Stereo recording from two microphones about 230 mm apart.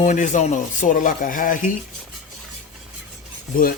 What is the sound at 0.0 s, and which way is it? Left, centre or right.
Speech, left.